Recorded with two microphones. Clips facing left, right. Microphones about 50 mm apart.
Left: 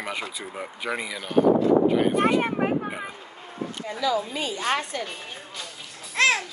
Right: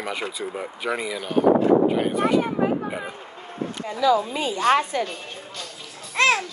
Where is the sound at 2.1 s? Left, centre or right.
Left.